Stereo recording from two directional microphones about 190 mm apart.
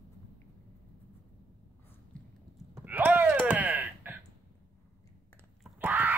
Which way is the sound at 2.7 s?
10° right (ahead or behind).